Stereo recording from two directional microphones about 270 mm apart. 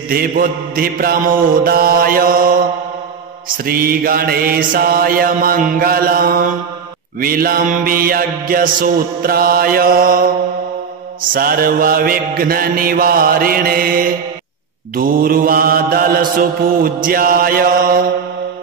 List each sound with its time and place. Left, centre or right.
0.1 s mantra: right
3.6 s mantra: right
11.3 s mantra: right